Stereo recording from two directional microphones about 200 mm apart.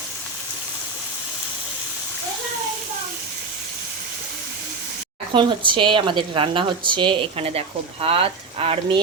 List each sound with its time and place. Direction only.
5.3 s speech: 25° right (ahead or behind)